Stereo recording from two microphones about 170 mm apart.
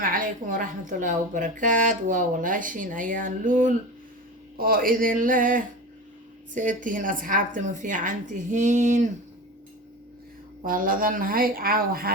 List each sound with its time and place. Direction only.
0.0 s a woman's voice: 55° right (ahead or behind)
10.6 s speech: 55° right (ahead or behind)